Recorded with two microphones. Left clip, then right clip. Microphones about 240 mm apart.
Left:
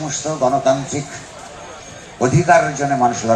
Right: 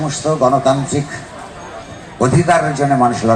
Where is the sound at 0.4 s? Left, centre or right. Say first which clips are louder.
Right 2 dB; right.